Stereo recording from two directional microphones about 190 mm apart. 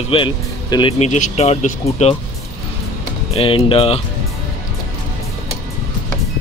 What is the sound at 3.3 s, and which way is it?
Speech, 30° left (ahead or behind).